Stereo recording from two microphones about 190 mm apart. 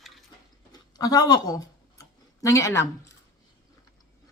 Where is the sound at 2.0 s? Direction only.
15° left (ahead or behind).